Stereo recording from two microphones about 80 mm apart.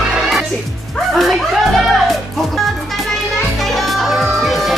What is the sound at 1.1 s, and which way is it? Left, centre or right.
Music, centre.